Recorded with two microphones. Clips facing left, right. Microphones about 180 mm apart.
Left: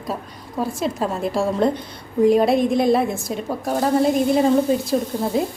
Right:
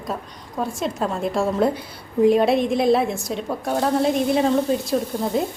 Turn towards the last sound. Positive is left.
turn(degrees=0)  # may be behind; listen again after turning